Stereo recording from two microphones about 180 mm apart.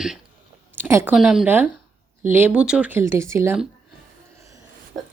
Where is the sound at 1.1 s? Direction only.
Centre (ahead or behind).